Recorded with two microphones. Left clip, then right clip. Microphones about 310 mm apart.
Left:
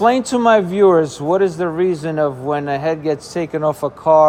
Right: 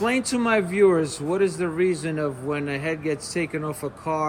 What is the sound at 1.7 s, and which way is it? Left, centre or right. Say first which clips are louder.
Speech: left 5 dB; left.